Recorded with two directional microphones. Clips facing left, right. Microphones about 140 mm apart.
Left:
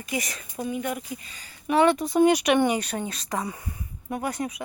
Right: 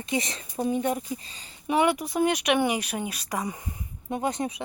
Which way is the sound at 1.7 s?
15° right (ahead or behind).